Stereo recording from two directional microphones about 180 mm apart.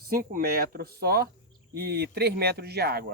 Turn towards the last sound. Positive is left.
turn(degrees=-60)  # may be behind; listen again after turning